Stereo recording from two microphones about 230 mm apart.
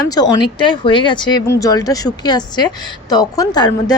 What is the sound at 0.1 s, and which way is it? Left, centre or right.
Speech, centre.